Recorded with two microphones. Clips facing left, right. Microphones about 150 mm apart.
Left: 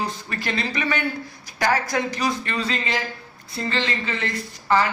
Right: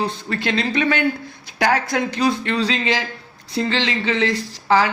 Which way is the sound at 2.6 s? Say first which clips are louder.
Right 5 dB; 90° right.